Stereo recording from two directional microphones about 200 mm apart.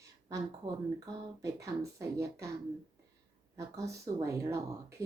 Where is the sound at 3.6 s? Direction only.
15° right (ahead or behind).